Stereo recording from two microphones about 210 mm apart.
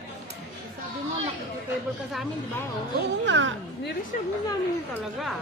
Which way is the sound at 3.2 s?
60° right (ahead or behind).